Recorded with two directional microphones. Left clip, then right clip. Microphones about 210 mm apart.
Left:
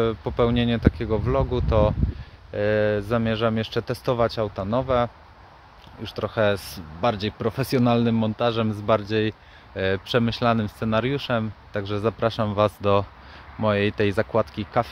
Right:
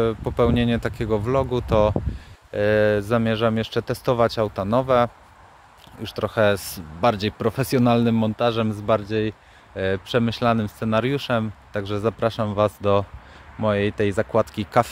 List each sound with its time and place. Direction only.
0.0 s speech: 10° right (ahead or behind)